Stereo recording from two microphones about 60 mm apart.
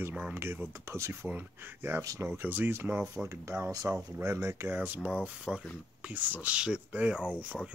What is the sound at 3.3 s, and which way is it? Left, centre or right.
Speech, right.